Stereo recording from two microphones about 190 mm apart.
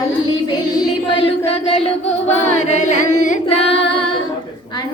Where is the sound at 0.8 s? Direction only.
25° left (ahead or behind).